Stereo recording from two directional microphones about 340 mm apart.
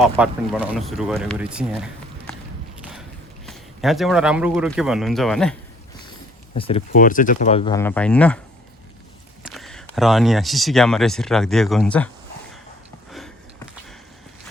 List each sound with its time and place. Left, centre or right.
0.0 s speech: centre
3.4 s speech: centre
6.5 s speech: centre
9.4 s speech: centre
13.1 s a sound: centre